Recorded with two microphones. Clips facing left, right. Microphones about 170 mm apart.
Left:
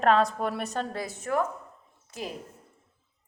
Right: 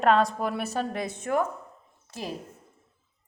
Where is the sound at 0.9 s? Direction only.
20° right (ahead or behind).